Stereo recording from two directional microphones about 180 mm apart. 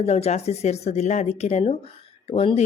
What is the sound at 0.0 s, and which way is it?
Speech, 35° left (ahead or behind).